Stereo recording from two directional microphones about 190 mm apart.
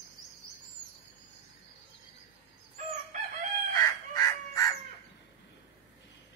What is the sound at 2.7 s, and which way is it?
Crowing, 40° right (ahead or behind).